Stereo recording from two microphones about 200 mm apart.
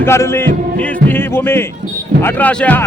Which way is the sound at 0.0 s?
10° left (ahead or behind).